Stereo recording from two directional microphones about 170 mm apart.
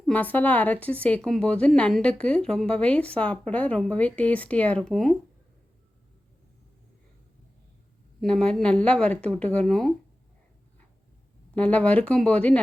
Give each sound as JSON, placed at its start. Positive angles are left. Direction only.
{"t": 0.0, "sound": "a woman's voice", "side_deg": 10}
{"t": 8.2, "sound": "speech", "side_deg": 5}
{"t": 11.5, "sound": "a woman's voice", "side_deg": 10}